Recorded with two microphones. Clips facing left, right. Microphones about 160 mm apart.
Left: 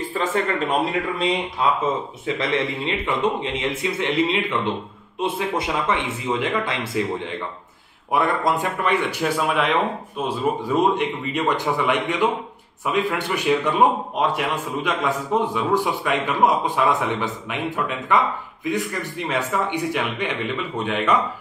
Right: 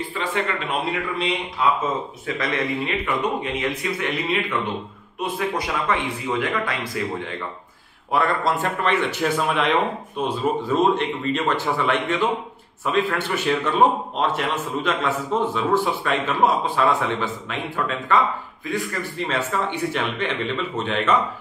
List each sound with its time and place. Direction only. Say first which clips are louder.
0.2 s speech: left 3 dB; 45° left (ahead or behind)
2.2 s a man's voice: left 2 dB; 25° left (ahead or behind); by 21.2 s 10° left (ahead or behind)